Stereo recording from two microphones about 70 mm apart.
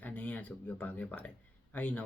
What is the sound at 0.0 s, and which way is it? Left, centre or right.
Speech, left.